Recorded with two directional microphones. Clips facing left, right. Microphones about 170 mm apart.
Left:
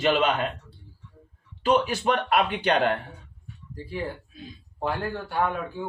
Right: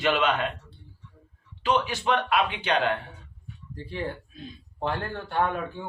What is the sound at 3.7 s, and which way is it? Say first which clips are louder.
Speech: left 1 dB; 5° left (ahead or behind).